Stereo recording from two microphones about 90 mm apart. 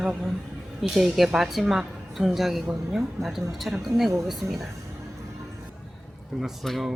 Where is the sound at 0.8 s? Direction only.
5° right (ahead or behind).